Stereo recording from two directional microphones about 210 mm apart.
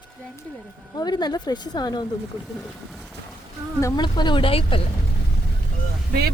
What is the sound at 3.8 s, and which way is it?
Speech, 15° left (ahead or behind).